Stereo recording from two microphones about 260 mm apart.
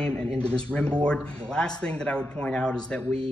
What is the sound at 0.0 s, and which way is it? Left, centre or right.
A man's voice, centre.